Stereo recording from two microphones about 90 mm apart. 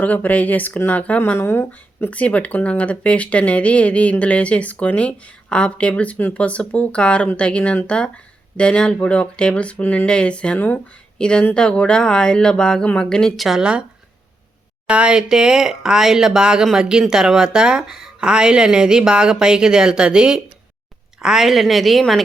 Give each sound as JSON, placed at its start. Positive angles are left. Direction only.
{"t": 0.0, "sound": "speech", "side_deg": 15}
{"t": 10.1, "sound": "speech", "side_deg": 10}
{"t": 14.8, "sound": "a woman's voice", "side_deg": -10}